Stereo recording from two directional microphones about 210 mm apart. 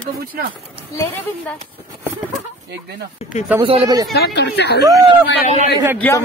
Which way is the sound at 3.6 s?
25° right (ahead or behind).